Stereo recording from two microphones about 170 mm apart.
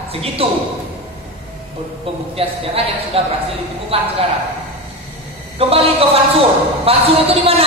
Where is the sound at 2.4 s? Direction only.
35° right (ahead or behind).